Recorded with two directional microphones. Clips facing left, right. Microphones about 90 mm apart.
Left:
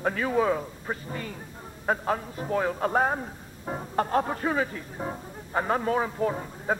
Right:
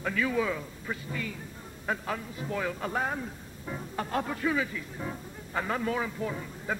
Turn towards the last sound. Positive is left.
turn(degrees=40)  # may be behind; listen again after turning